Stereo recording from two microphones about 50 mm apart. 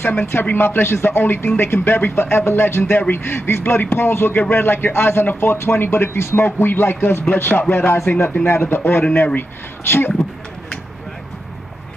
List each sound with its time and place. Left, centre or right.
0.0 s a man's voice: left
3.3 s a man's voice: left
6.4 s a man's voice: left
9.1 s speech: left
9.8 s a man's voice: left